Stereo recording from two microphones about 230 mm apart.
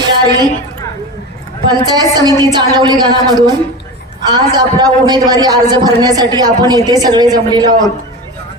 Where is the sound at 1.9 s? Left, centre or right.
Centre.